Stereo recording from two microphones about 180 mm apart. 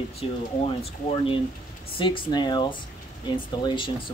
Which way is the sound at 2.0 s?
25° left (ahead or behind).